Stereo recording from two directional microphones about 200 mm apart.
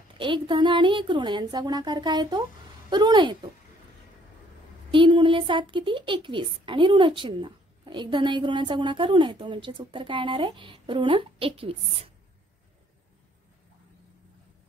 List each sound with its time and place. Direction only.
0.2 s a woman's voice: 25° right (ahead or behind)
4.9 s a woman's voice: 25° right (ahead or behind)